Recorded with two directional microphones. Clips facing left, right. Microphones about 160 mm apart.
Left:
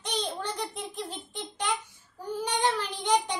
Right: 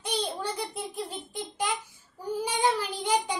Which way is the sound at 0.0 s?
10° right (ahead or behind).